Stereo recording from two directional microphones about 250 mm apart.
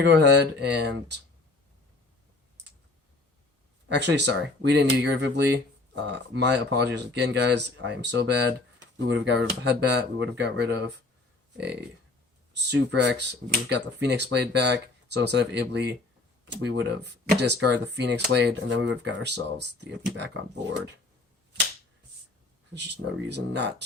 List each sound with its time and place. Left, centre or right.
0.0 s speech: right
3.8 s speech: right
12.5 s speech: right
22.7 s speech: right